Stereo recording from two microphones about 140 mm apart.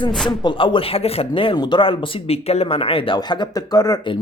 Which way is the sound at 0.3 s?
35° left (ahead or behind).